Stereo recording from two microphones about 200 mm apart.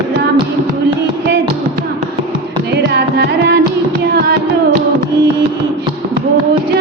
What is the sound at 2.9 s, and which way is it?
Music, 55° right (ahead or behind).